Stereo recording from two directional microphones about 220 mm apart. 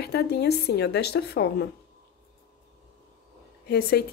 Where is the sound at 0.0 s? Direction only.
50° left (ahead or behind).